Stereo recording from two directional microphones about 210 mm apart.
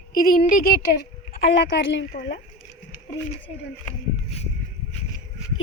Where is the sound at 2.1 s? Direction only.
40° left (ahead or behind).